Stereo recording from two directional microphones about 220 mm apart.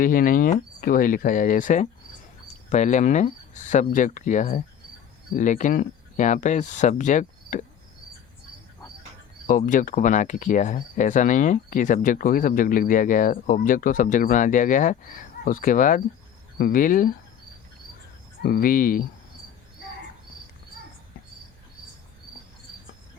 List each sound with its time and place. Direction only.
0.0 s speech: 40° left (ahead or behind)
9.5 s speech: 35° left (ahead or behind)
18.4 s speech: 40° left (ahead or behind)